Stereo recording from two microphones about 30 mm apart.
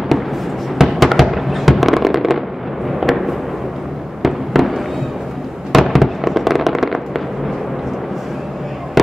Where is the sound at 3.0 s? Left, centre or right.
Centre.